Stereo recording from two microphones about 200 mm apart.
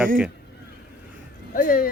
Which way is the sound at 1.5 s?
45° left (ahead or behind).